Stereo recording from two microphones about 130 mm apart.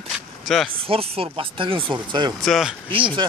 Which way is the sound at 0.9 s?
45° right (ahead or behind).